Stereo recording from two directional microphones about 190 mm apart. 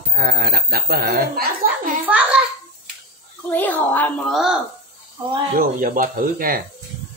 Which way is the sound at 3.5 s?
10° left (ahead or behind).